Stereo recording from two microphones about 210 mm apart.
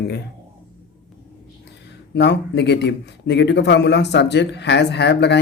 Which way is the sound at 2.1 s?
55° left (ahead or behind).